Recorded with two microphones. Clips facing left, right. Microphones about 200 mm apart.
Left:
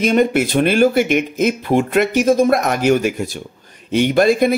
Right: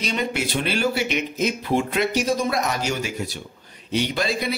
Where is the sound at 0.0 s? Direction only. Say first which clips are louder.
Left 11 dB; 50° left (ahead or behind).